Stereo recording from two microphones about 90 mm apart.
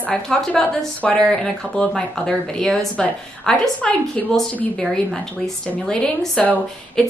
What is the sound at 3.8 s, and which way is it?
A woman's voice, 15° left (ahead or behind).